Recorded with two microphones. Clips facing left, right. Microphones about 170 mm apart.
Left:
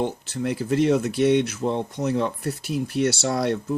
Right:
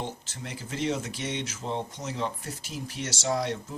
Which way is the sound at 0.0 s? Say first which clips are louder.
Left 11 dB; 60° left (ahead or behind).